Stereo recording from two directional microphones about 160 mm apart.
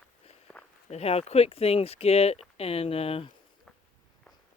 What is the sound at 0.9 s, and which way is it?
Speech, 40° left (ahead or behind).